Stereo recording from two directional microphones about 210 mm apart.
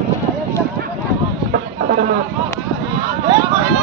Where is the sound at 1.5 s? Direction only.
45° right (ahead or behind).